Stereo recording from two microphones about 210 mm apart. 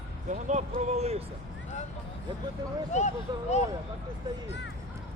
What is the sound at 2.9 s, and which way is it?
Speech, 35° left (ahead or behind).